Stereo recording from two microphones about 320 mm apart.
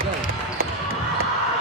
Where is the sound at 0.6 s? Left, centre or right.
Right.